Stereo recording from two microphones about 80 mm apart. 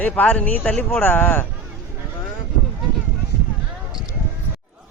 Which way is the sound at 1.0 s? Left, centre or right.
Left.